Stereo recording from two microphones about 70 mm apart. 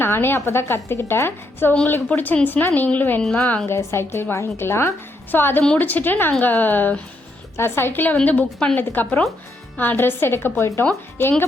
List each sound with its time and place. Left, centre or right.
0.0 s a woman's voice: left
2.0 s a woman's voice: left
3.2 s a woman's voice: centre
3.7 s a woman's voice: left